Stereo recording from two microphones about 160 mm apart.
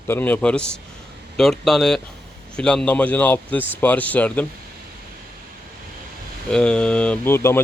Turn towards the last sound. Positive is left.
turn(degrees=15)  # may be behind; listen again after turning